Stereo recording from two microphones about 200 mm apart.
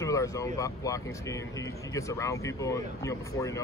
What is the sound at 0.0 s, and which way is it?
Vehicle, 15° left (ahead or behind).